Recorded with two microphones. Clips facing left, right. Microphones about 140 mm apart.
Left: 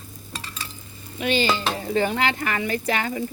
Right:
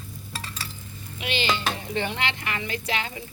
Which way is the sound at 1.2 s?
45° left (ahead or behind).